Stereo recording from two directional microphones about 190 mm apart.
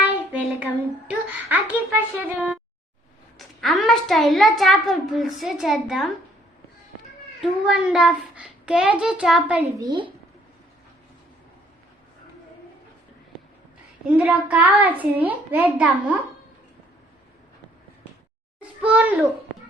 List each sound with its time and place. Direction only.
0.6 s a child's voice: 10° right (ahead or behind)
7.6 s a child's voice: 5° right (ahead or behind)
9.8 s a child's voice: 25° right (ahead or behind)
14.1 s a child's voice: 5° right (ahead or behind)
18.8 s a child's voice: 5° right (ahead or behind)